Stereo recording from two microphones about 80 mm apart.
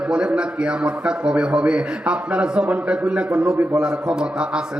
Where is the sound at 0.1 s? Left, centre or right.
Centre.